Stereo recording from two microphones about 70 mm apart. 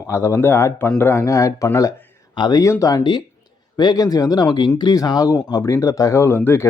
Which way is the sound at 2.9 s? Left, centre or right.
Left.